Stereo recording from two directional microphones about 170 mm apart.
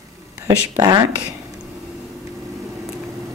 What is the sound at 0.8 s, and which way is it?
Speech, 25° right (ahead or behind).